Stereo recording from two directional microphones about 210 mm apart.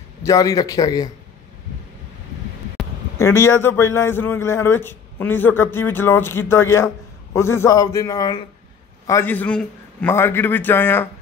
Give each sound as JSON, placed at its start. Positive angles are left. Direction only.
{"t": 0.2, "sound": "a man's voice", "side_deg": 15}
{"t": 3.2, "sound": "a man's voice", "side_deg": 15}